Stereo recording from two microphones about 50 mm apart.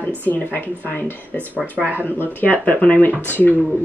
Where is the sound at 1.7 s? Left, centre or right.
Right.